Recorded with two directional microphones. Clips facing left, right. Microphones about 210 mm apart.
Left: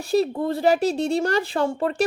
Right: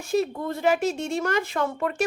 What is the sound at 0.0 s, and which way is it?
A woman's voice, 35° left (ahead or behind).